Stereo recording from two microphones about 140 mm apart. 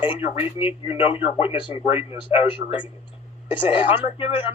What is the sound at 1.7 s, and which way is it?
Speech, 40° left (ahead or behind).